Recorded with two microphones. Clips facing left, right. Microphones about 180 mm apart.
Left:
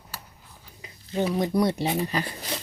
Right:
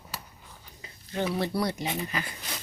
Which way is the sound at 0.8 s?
15° left (ahead or behind).